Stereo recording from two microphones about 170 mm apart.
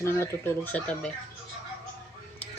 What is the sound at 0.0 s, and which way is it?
Speech, 15° left (ahead or behind).